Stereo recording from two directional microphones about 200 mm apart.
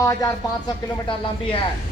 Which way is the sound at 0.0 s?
15° left (ahead or behind).